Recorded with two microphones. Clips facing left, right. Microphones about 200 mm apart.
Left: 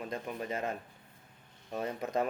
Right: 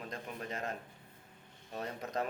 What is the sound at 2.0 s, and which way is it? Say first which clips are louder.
Speech: left 5 dB; 55° left (ahead or behind).